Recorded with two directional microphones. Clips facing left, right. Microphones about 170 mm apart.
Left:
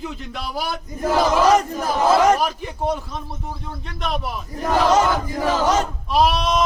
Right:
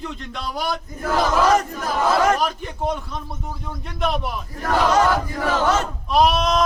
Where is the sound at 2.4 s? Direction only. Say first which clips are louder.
Left 1 dB; 5° left (ahead or behind).